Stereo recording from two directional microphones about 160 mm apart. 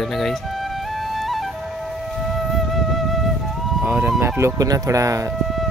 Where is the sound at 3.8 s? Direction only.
10° right (ahead or behind).